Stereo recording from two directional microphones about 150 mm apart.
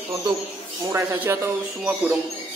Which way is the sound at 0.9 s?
15° right (ahead or behind).